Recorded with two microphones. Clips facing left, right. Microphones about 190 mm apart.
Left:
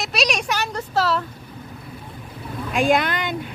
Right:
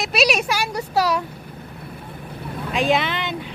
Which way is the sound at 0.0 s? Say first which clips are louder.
Right 4 dB; 5° right (ahead or behind).